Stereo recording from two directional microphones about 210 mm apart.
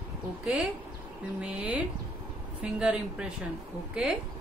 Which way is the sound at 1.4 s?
5° right (ahead or behind).